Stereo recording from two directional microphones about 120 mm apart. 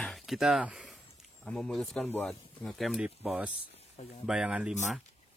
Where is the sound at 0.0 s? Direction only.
Centre (ahead or behind).